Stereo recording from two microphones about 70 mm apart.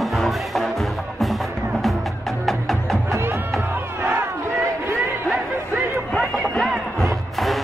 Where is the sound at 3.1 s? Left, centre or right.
Right.